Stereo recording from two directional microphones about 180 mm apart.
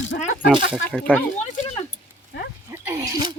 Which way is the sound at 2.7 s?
15° right (ahead or behind).